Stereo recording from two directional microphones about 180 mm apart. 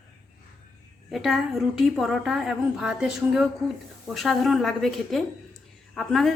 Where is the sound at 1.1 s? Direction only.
Centre (ahead or behind).